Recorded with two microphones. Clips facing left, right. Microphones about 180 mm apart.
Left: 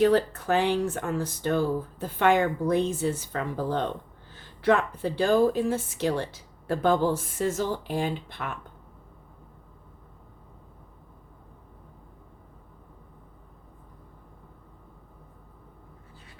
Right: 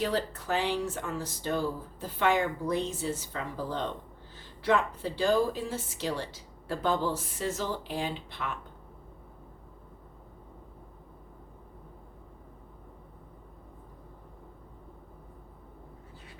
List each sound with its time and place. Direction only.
0.0 s speech: 55° left (ahead or behind)